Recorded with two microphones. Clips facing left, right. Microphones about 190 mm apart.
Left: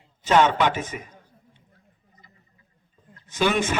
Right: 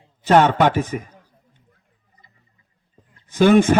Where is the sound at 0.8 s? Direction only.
35° right (ahead or behind).